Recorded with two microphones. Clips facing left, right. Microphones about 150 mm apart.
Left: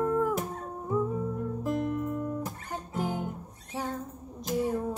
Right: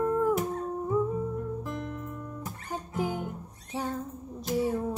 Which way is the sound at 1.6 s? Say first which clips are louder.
Left 7 dB; 45° left (ahead or behind).